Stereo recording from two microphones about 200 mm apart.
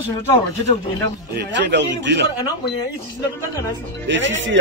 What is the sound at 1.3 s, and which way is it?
Speech, 60° right (ahead or behind).